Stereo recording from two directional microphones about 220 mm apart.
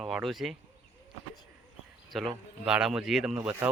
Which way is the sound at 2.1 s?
Centre (ahead or behind).